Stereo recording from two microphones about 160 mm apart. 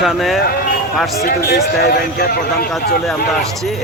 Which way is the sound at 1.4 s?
90° left.